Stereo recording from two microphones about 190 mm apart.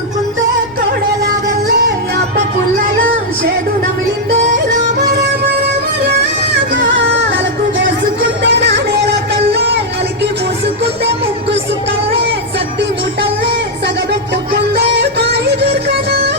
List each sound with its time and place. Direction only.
8.2 s music: 60° right (ahead or behind)
15.2 s music: 65° right (ahead or behind)